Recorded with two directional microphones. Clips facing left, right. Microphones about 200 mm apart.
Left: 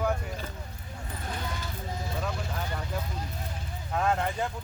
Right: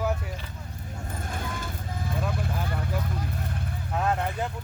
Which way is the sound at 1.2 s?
50° right (ahead or behind).